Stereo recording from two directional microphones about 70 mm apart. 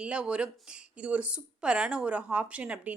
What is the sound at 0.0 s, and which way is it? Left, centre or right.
Speech, centre.